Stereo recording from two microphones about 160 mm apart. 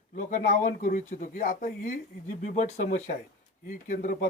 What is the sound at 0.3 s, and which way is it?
Speech, 55° left (ahead or behind).